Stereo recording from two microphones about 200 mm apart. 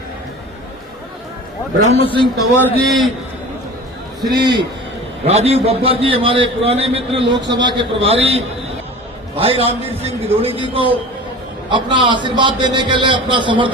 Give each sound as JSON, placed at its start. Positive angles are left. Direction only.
{"t": 2.0, "sound": "a man's voice", "side_deg": 25}
{"t": 2.6, "sound": "a man's voice", "side_deg": 5}
{"t": 4.4, "sound": "a man's voice", "side_deg": -20}